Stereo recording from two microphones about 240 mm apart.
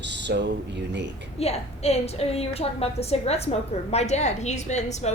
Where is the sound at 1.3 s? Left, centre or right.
Left.